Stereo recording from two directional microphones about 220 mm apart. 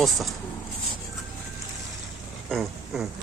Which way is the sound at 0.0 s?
Centre (ahead or behind).